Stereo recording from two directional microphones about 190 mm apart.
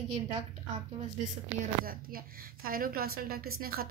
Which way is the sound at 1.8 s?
50° right (ahead or behind).